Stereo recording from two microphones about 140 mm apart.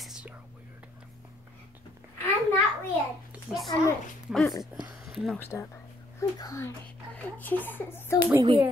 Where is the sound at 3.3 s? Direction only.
5° right (ahead or behind).